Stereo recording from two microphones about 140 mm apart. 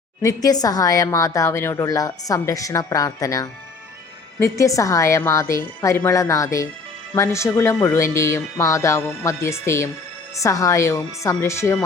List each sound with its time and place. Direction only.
0.2 s a woman's voice: 25° left (ahead or behind)